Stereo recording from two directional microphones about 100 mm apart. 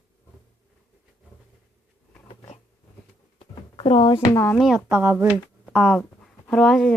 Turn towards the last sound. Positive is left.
turn(degrees=5)  # may be behind; listen again after turning